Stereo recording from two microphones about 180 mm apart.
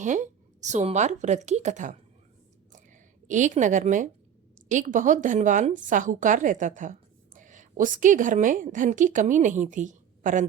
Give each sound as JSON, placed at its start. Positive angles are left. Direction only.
{"t": 0.0, "sound": "a woman's voice", "side_deg": -45}
{"t": 2.7, "sound": "a sound", "side_deg": -45}
{"t": 4.7, "sound": "a woman's voice", "side_deg": -45}